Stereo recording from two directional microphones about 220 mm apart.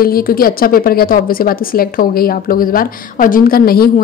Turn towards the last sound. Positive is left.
turn(degrees=45)  # may be behind; listen again after turning